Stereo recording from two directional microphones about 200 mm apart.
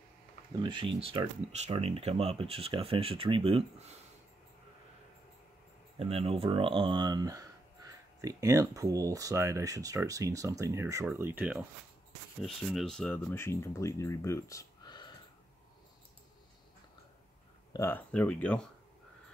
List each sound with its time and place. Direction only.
0.5 s speech: 20° right (ahead or behind)
5.9 s speech: 30° right (ahead or behind); by 15.1 s 20° left (ahead or behind)
17.7 s speech: 10° left (ahead or behind)